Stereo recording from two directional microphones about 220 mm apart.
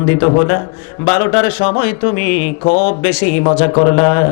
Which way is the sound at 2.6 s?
30° left (ahead or behind).